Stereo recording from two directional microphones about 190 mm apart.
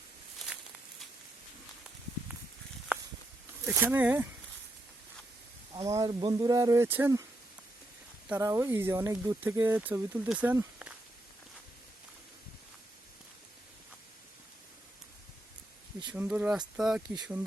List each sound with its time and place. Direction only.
3.7 s speech: 10° right (ahead or behind)
5.7 s speech: 15° right (ahead or behind)
8.3 s speech: 15° right (ahead or behind)
16.1 s speech: 10° right (ahead or behind)